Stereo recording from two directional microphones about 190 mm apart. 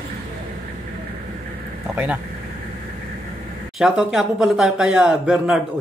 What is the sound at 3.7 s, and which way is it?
Speech, centre (ahead or behind).